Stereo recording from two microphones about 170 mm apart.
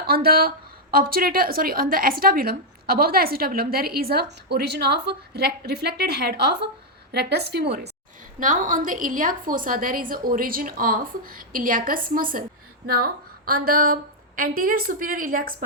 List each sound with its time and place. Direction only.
0.0 s a woman's voice: 65° right (ahead or behind)
8.4 s a woman's voice: 50° right (ahead or behind)